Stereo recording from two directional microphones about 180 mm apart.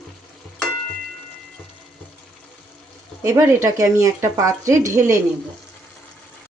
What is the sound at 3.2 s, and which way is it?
Speech, 15° right (ahead or behind).